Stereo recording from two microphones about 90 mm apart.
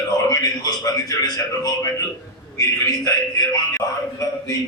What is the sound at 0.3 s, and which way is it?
A man's voice, 40° left (ahead or behind).